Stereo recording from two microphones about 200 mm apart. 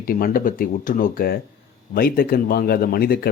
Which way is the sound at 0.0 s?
45° left (ahead or behind).